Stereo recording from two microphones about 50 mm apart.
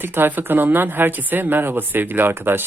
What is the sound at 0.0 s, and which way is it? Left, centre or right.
Speech, right.